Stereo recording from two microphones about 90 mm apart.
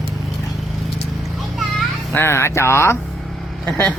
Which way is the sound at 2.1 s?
25° left (ahead or behind).